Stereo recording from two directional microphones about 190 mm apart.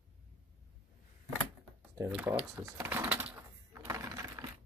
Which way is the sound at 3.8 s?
15° right (ahead or behind).